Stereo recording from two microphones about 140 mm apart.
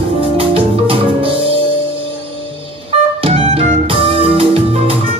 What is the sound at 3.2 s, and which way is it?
Music, 40° right (ahead or behind).